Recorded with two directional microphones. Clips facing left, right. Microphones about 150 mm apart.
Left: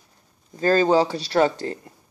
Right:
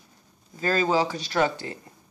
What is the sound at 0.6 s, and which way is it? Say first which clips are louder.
Speech: left 5 dB; 35° left (ahead or behind).